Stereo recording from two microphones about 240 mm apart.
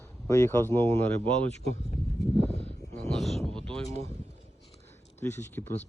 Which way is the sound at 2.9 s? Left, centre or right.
Centre.